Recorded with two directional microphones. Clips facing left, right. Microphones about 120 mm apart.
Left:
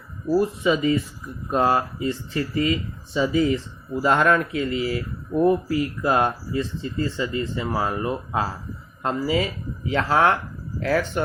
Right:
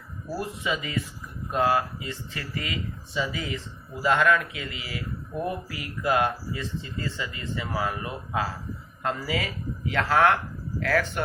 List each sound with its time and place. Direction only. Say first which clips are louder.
0.3 s speech: left 10 dB; 30° left (ahead or behind)